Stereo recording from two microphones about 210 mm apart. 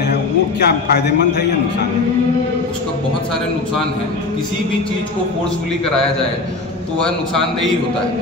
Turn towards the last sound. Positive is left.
turn(degrees=0)  # may be behind; listen again after turning